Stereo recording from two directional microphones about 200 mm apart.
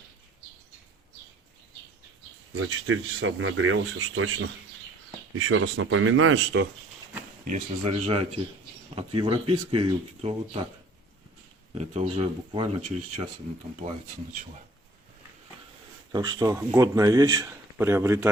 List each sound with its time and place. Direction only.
2.6 s speech: 75° right (ahead or behind)
5.5 s speech: 90° right; by 6.7 s 65° right (ahead or behind)
7.4 s speech: 35° right (ahead or behind)
11.7 s speech: 30° right (ahead or behind)
16.1 s speech: 20° right (ahead or behind)